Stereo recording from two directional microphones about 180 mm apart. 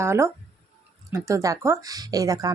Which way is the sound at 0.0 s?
15° right (ahead or behind).